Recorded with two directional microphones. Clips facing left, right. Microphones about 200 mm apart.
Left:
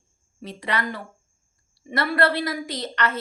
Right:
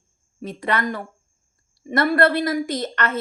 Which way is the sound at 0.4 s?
50° right (ahead or behind).